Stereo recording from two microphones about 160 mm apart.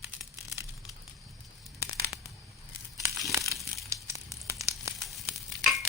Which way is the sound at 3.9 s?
20° right (ahead or behind).